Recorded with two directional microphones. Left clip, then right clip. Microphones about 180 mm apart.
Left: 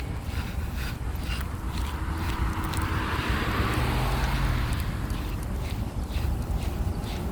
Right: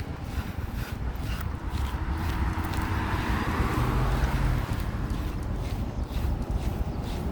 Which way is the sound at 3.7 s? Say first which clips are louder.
Left 1 dB; 55° right (ahead or behind).